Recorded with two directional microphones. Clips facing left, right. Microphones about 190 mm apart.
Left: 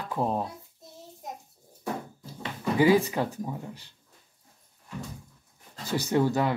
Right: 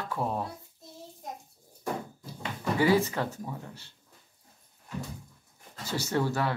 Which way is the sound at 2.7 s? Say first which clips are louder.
Left 3 dB; 15° left (ahead or behind).